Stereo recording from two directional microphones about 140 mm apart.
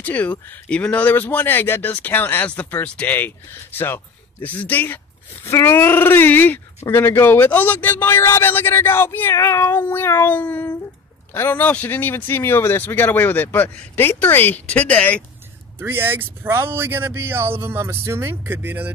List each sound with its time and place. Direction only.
0.0 s speech: 10° left (ahead or behind)
15.8 s speech: 15° right (ahead or behind)